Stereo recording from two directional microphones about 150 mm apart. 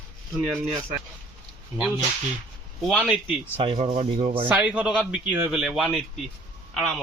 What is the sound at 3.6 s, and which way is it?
Speech, 40° right (ahead or behind).